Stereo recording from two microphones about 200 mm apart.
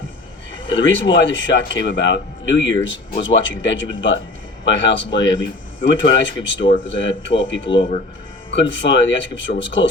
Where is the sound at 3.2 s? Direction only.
70° left (ahead or behind).